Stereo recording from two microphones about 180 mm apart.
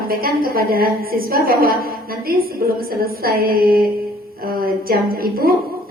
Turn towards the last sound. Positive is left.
turn(degrees=-55)  # may be behind; listen again after turning